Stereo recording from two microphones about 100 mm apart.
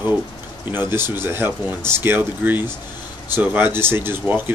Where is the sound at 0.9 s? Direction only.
25° right (ahead or behind).